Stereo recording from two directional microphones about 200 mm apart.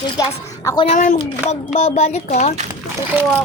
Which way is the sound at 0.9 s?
40° left (ahead or behind).